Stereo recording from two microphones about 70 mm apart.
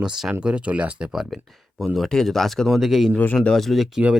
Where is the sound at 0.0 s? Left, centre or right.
Centre.